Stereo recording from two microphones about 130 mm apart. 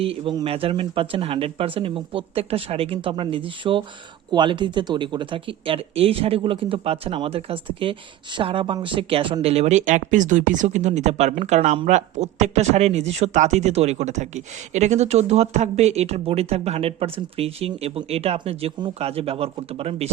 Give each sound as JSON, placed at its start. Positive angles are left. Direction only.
{"t": 0.0, "sound": "speech", "side_deg": -45}